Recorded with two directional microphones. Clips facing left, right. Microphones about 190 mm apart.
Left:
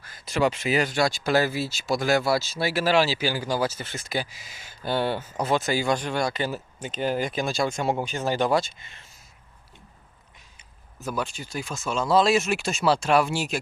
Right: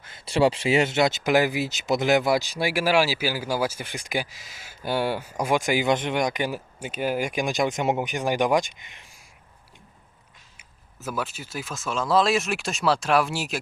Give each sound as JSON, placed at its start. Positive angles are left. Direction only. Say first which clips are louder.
{"t": 0.0, "sound": "speech", "louder": "right 3 dB", "side_deg": -25}
{"t": 4.3, "sound": "speech", "louder": "even", "side_deg": 0}
{"t": 10.6, "sound": "speech", "louder": "left 2 dB", "side_deg": -5}